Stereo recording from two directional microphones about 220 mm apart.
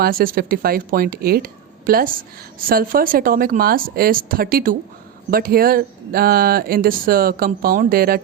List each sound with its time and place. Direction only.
0.0 s a woman's voice: 40° right (ahead or behind)